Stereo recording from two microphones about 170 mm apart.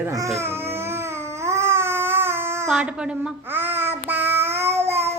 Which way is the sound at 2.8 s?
5° right (ahead or behind).